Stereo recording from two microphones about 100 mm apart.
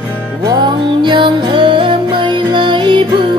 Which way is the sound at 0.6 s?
50° right (ahead or behind).